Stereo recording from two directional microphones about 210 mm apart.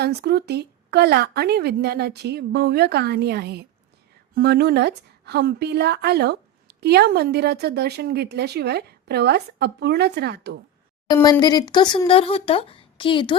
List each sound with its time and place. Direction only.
0.0 s speech: 50° right (ahead or behind)
11.1 s speech: 20° left (ahead or behind)